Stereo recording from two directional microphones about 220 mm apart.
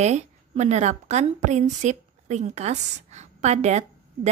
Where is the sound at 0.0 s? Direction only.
30° right (ahead or behind).